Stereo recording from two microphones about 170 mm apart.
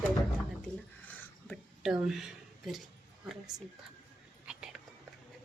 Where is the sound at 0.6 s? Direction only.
5° left (ahead or behind).